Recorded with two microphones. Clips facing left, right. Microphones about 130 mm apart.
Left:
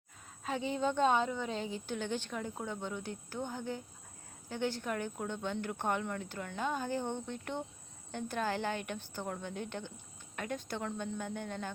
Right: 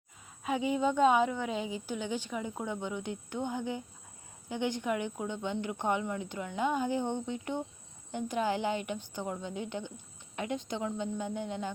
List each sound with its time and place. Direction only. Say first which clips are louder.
0.4 s speech: right 4 dB; 10° right (ahead or behind)